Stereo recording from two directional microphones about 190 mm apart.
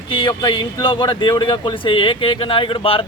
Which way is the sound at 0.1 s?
25° left (ahead or behind).